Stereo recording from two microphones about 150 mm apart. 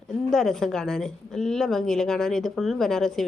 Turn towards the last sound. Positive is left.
turn(degrees=5)  # may be behind; listen again after turning